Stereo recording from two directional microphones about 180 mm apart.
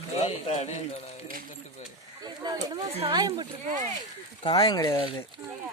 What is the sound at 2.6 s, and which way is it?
Speech, 25° right (ahead or behind).